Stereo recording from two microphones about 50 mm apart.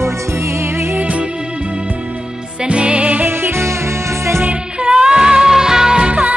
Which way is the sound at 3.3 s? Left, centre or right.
Right.